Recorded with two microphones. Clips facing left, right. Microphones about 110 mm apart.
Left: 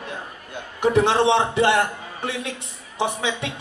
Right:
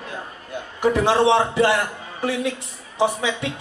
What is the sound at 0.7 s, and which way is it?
Speech, 20° left (ahead or behind).